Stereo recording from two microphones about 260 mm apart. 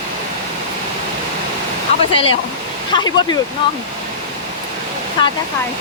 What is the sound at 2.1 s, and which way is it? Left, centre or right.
Speech, left.